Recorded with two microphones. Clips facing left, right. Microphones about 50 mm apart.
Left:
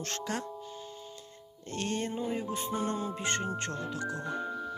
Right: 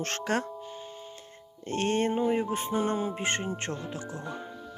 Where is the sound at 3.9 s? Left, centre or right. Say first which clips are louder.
Left 2 dB; left.